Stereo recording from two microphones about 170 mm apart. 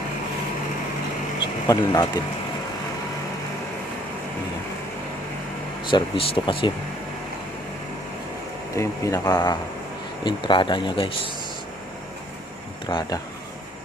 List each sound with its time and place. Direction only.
1.6 s speech: 20° left (ahead or behind)
5.9 s speech: 30° left (ahead or behind)
8.7 s speech: 15° left (ahead or behind)
12.9 s speech: 25° left (ahead or behind)